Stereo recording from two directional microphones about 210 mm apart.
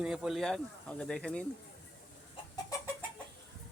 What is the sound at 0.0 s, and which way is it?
Speech, centre (ahead or behind).